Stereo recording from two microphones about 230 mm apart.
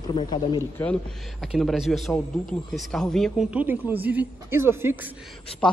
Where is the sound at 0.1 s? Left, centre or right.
Centre.